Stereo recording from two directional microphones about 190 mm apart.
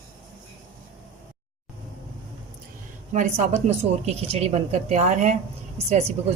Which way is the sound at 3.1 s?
40° right (ahead or behind).